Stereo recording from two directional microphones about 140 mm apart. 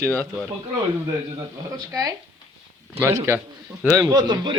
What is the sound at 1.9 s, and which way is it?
A man's voice, 25° right (ahead or behind).